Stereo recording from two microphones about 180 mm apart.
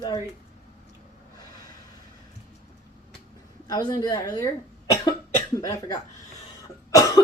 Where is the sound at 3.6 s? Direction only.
25° left (ahead or behind).